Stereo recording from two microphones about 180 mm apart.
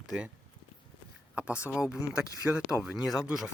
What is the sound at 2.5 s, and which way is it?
Speech, 5° right (ahead or behind).